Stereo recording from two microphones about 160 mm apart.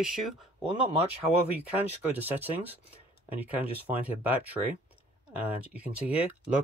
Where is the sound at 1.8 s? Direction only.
10° right (ahead or behind).